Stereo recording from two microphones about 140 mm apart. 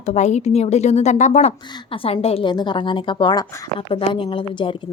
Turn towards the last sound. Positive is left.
turn(degrees=35)  # may be behind; listen again after turning